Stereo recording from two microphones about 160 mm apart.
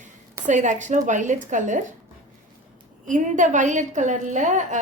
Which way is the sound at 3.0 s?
50° right (ahead or behind).